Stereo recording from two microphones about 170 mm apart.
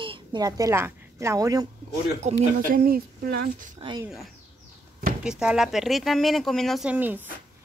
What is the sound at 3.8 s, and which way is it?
Speech, 25° right (ahead or behind).